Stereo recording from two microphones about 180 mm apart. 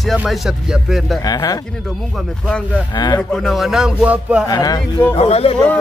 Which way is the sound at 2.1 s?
Centre (ahead or behind).